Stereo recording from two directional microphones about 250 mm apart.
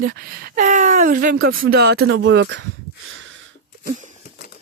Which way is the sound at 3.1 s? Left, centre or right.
Right.